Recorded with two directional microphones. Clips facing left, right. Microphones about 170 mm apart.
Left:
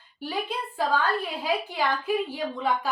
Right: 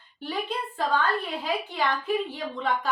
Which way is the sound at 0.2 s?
5° left (ahead or behind).